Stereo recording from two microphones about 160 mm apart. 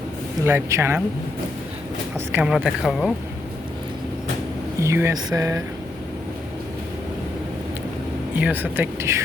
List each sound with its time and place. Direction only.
0.4 s speech: 15° right (ahead or behind)
2.1 s speech: 10° right (ahead or behind)
4.8 s speech: 15° right (ahead or behind)
8.4 s speech: 10° right (ahead or behind)